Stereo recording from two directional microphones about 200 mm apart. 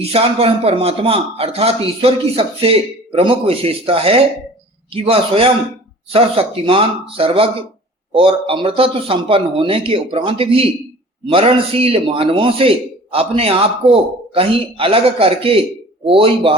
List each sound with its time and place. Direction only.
0.0 s a man's voice: 30° right (ahead or behind)